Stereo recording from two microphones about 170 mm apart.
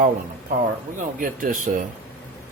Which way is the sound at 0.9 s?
55° right (ahead or behind).